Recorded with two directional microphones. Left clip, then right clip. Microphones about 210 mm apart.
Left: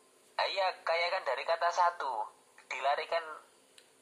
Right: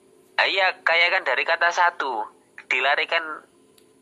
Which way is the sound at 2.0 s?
55° right (ahead or behind).